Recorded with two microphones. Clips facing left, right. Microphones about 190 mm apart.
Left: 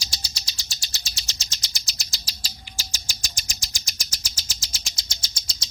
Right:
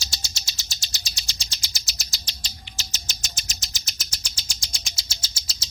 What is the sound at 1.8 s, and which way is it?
Bird, centre (ahead or behind).